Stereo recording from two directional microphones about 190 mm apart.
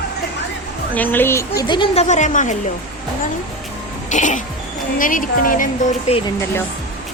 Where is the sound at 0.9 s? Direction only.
10° left (ahead or behind); by 2.5 s 40° left (ahead or behind).